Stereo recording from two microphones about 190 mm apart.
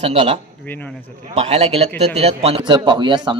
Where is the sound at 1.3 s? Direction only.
35° right (ahead or behind).